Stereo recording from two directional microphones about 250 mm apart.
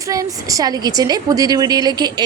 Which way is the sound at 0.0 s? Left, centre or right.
Centre.